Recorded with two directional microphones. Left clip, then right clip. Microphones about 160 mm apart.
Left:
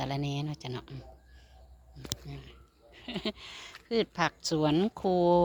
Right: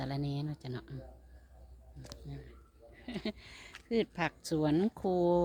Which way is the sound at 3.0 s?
5° left (ahead or behind).